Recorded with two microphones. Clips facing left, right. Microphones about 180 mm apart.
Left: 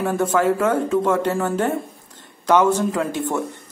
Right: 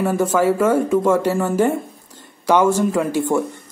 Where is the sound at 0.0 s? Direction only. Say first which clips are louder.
Right 2 dB; 5° right (ahead or behind).